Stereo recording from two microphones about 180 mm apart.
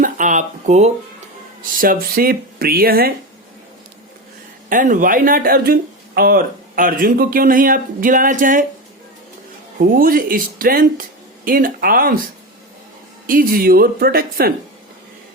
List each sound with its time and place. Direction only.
0.0 s speech: 45° right (ahead or behind)
1.7 s speech: 50° right (ahead or behind)
4.7 s speech: 45° right (ahead or behind)
9.8 s speech: 50° right (ahead or behind)
13.2 s speech: 50° right (ahead or behind)